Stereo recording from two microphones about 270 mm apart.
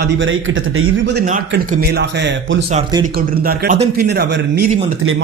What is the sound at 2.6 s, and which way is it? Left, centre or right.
Speech, centre.